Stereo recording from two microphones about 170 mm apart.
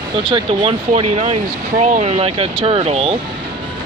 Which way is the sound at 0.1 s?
30° right (ahead or behind).